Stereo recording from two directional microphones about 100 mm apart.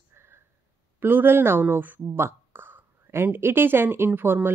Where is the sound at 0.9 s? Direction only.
20° right (ahead or behind).